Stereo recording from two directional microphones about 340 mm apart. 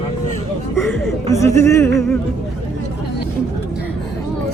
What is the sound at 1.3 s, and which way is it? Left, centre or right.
Speech, centre.